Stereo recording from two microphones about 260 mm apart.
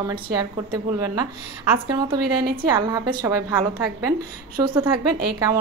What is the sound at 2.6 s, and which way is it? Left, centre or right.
Speech, centre.